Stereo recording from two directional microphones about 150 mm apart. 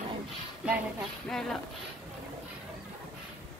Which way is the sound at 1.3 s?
5° left (ahead or behind).